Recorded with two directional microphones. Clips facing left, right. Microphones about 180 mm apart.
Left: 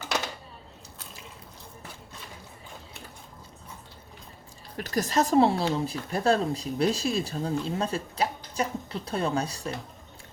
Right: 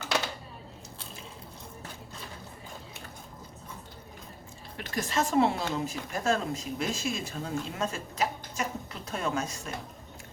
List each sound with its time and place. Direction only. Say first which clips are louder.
4.8 s speech: left 5 dB; 40° left (ahead or behind)